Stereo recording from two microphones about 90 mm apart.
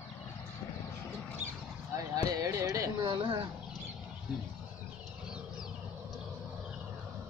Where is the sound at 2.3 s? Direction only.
35° right (ahead or behind).